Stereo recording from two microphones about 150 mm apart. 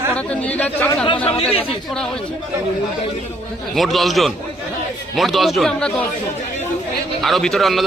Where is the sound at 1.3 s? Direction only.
40° left (ahead or behind).